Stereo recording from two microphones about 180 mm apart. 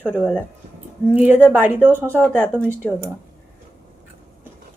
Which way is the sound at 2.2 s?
5° left (ahead or behind).